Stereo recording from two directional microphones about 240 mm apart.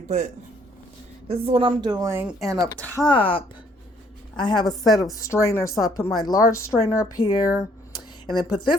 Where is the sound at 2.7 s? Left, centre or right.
Centre.